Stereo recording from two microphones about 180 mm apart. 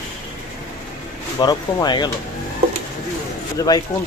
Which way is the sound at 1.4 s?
25° left (ahead or behind).